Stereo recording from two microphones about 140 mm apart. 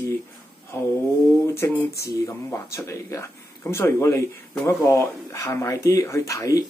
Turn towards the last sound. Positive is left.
turn(degrees=25)  # may be behind; listen again after turning